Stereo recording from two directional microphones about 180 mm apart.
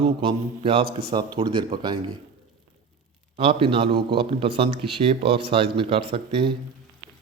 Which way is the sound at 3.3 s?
30° right (ahead or behind).